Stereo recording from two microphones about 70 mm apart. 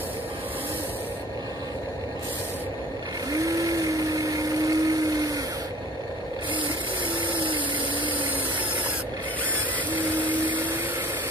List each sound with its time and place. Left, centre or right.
3.3 s blender: right
10.2 s vacuum cleaner: right